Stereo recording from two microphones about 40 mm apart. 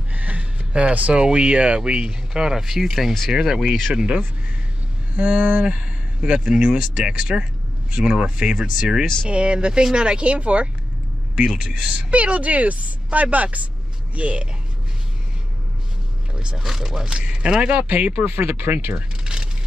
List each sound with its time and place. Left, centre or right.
0.1 s music: right
1.1 s a man's voice: right
12.1 s speech: right
16.5 s speech: centre
17.0 s speech: right
18.2 s speech: right
18.7 s speech: right
18.9 s a sound: right